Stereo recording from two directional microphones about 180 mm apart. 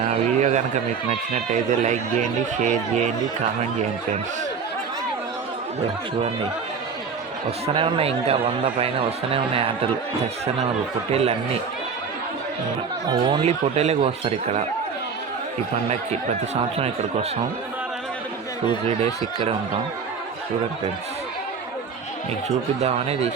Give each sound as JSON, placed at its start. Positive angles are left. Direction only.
{"t": 0.0, "sound": "a sound", "side_deg": -40}
{"t": 1.3, "sound": "speech", "side_deg": -40}
{"t": 7.7, "sound": "speech", "side_deg": -30}
{"t": 11.1, "sound": "speech", "side_deg": -35}
{"t": 13.1, "sound": "speech", "side_deg": -25}
{"t": 13.4, "sound": "speech", "side_deg": -35}
{"t": 15.9, "sound": "speech", "side_deg": -35}
{"t": 18.9, "sound": "speech", "side_deg": -35}
{"t": 22.4, "sound": "speech", "side_deg": -35}